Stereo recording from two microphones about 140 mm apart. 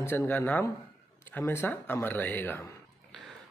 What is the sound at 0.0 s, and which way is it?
Speech, 15° left (ahead or behind).